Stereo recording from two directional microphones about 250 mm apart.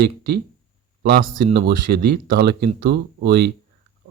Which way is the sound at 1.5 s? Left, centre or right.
Right.